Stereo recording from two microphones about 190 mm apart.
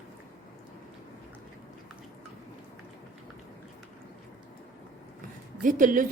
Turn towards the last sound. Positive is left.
turn(degrees=-45)  # may be behind; listen again after turning